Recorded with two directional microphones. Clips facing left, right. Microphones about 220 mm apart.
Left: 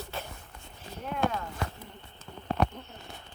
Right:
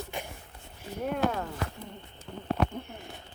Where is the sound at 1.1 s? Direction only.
45° right (ahead or behind).